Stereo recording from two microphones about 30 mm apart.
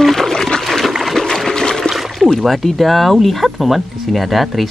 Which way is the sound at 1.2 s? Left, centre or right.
Centre.